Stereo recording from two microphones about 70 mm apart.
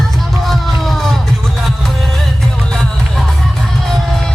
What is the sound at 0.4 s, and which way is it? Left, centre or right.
Music, centre.